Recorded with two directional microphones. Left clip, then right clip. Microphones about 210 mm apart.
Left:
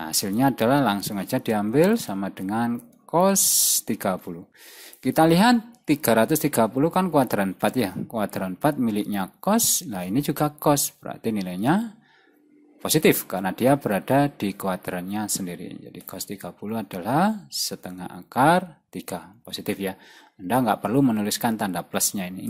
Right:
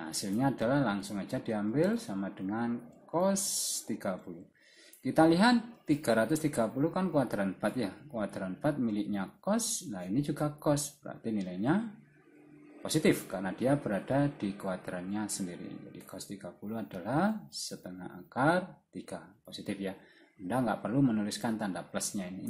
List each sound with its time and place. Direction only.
0.0 s speech: 40° left (ahead or behind)
12.8 s speech: 40° left (ahead or behind)